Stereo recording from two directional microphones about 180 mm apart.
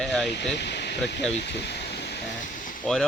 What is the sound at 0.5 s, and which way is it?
Speech, 70° left (ahead or behind).